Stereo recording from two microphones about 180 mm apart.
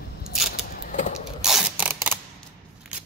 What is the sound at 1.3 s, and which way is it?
Mechanisms, 5° right (ahead or behind).